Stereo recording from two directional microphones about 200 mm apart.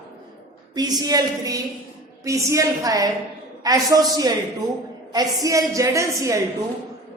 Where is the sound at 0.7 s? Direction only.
20° right (ahead or behind).